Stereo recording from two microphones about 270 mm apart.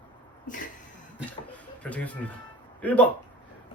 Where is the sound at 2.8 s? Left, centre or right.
Centre.